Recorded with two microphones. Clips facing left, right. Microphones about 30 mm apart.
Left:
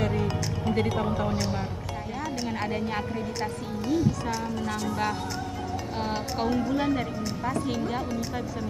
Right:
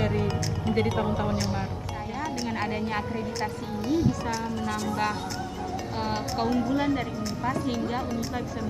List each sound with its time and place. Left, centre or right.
0.0 s a woman's voice: centre